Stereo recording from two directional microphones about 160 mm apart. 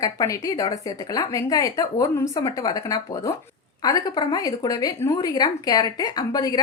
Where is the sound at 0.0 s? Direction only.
20° left (ahead or behind).